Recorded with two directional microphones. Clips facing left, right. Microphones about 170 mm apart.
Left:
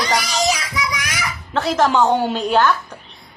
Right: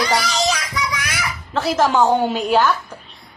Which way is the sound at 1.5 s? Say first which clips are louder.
Even; centre (ahead or behind).